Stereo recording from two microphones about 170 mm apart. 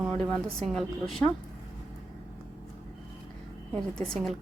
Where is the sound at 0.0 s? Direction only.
Centre (ahead or behind).